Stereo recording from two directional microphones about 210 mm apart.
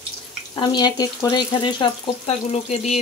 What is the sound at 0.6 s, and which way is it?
Speech, 20° left (ahead or behind).